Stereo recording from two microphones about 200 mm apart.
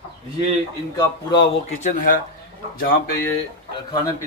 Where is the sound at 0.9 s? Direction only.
25° left (ahead or behind).